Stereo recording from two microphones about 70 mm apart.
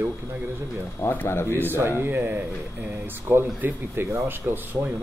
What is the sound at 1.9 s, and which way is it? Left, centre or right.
A man's voice, right.